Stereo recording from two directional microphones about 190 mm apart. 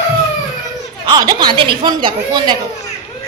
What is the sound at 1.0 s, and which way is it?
Speech, 20° right (ahead or behind).